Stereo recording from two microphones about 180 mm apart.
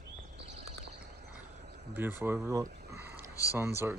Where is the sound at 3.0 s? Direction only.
10° right (ahead or behind).